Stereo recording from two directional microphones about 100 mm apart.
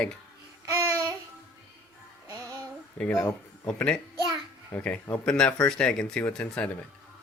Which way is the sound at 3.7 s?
10° left (ahead or behind).